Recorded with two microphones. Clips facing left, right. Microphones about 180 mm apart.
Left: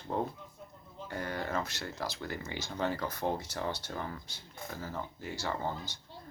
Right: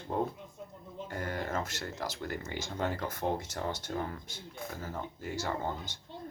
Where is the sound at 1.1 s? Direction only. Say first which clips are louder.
Even; 45° right (ahead or behind).